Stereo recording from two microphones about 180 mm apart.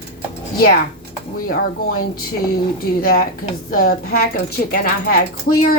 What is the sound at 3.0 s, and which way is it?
Female singing, 55° left (ahead or behind).